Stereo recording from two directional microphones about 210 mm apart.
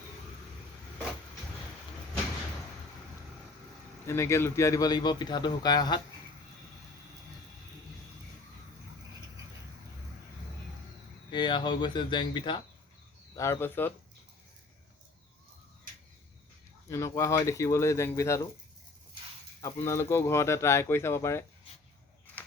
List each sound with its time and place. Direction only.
4.0 s a man's voice: 15° left (ahead or behind)
11.3 s a man's voice: 20° left (ahead or behind)
16.9 s speech: 15° left (ahead or behind)
19.6 s speech: 15° left (ahead or behind)